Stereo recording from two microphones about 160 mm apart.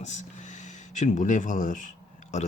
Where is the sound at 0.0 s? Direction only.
45° left (ahead or behind).